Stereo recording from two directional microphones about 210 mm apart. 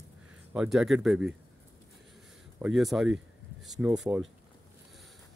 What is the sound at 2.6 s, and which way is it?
Speech, centre (ahead or behind).